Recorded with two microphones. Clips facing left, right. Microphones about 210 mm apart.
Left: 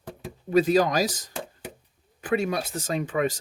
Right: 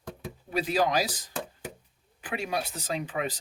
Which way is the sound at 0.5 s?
45° left (ahead or behind).